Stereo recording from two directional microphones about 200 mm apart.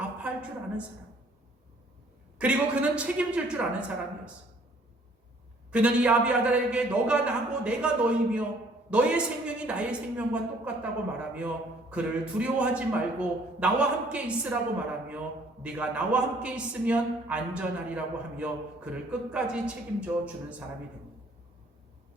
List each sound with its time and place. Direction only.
2.4 s a man's voice: 5° right (ahead or behind)
5.7 s a man's voice: 5° right (ahead or behind)